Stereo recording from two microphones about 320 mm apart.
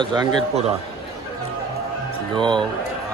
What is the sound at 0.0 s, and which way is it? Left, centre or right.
Speech, centre.